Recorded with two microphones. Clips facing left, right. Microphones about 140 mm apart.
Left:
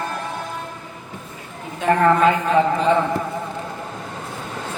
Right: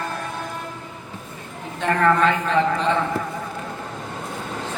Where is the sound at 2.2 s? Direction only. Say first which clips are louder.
Left 3 dB; 10° left (ahead or behind).